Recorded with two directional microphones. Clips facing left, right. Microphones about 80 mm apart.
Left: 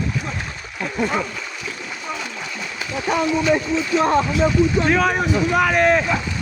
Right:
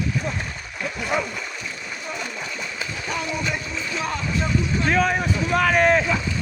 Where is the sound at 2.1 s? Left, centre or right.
Centre.